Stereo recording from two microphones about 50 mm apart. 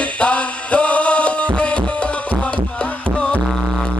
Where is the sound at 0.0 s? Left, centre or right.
Left.